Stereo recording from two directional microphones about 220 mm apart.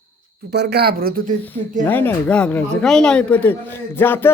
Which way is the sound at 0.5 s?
50° right (ahead or behind).